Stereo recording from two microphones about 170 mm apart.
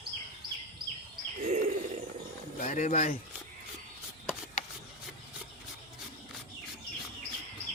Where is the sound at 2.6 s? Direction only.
45° left (ahead or behind).